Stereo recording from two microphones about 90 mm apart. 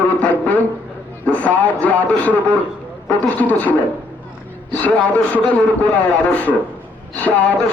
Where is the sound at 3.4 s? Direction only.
20° left (ahead or behind).